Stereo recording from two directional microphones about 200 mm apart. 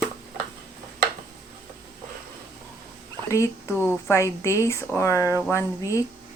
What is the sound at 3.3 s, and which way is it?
A woman's voice, 15° left (ahead or behind).